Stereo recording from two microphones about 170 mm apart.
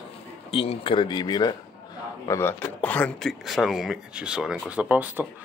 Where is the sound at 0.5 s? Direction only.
35° left (ahead or behind).